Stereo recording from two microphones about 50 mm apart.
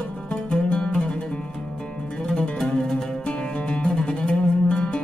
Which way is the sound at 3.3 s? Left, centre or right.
Left.